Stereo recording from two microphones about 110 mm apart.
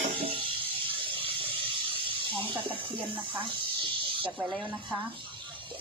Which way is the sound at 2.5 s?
50° right (ahead or behind).